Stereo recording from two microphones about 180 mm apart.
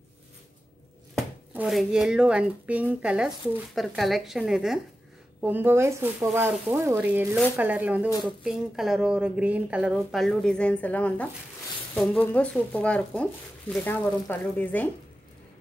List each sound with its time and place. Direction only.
1.5 s speech: 5° right (ahead or behind)